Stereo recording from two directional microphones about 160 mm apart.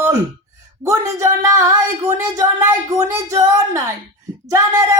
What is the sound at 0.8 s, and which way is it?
Speech, 20° right (ahead or behind).